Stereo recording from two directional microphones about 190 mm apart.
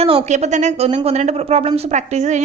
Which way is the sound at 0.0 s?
30° right (ahead or behind).